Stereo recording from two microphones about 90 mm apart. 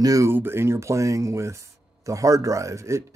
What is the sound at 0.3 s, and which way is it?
Speech, 25° right (ahead or behind).